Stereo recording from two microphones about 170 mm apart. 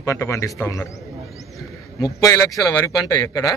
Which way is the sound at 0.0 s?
15° left (ahead or behind).